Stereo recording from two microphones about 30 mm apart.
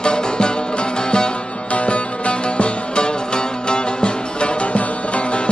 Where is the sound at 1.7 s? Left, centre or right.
Left.